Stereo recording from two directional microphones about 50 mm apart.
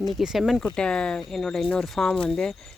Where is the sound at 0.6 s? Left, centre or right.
Centre.